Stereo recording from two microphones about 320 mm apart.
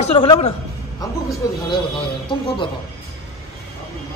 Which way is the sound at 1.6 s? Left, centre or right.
Centre.